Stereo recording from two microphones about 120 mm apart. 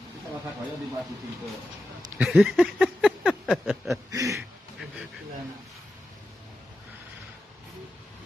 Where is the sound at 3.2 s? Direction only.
5° left (ahead or behind).